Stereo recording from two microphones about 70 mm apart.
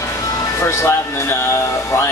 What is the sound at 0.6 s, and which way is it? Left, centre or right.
Speech, left.